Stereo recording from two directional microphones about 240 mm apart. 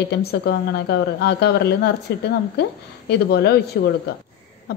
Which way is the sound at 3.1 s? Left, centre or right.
Left.